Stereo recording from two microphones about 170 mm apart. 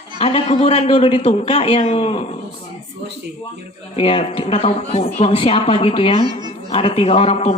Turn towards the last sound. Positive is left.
turn(degrees=35)  # may be behind; listen again after turning